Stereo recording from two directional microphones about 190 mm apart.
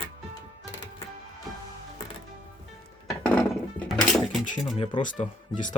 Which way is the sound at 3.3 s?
5° left (ahead or behind).